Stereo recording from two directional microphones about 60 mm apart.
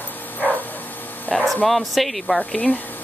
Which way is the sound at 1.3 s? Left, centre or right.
Centre.